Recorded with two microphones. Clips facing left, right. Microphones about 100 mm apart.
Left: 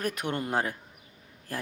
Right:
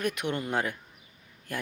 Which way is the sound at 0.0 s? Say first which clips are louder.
Right 1 dB; 40° left (ahead or behind).